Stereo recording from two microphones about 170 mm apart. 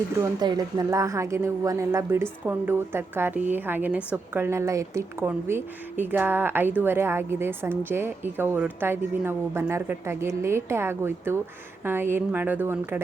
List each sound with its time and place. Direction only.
0.2 s a woman's voice: 25° right (ahead or behind)